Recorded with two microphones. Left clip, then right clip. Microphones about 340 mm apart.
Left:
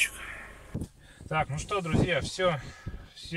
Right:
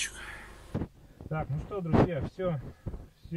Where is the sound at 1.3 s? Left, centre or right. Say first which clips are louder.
Left 7 dB; left.